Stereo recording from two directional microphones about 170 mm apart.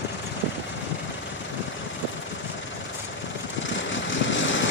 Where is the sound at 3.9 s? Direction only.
90° left.